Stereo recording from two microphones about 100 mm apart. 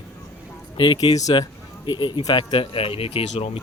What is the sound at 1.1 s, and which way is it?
Speech, 35° left (ahead or behind).